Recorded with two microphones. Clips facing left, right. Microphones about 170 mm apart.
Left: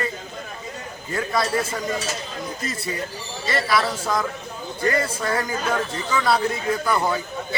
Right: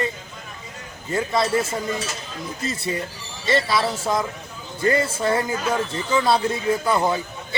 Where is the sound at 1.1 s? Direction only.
25° right (ahead or behind).